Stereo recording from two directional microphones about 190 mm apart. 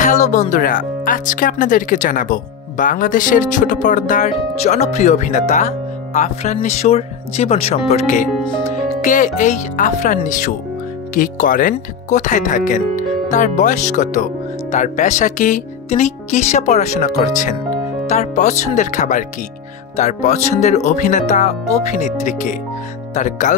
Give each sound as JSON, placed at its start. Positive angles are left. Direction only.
{"t": 0.0, "sound": "speech", "side_deg": 40}